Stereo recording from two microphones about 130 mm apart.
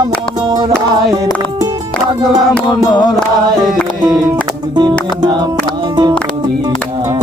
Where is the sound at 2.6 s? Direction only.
35° left (ahead or behind).